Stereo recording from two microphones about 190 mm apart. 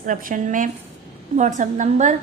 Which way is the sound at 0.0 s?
45° right (ahead or behind).